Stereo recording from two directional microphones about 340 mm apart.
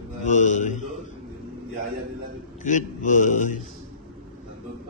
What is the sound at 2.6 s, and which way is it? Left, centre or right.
Mantra, left.